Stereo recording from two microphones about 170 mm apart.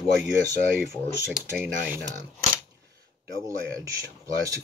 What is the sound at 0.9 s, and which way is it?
Speech, 5° right (ahead or behind).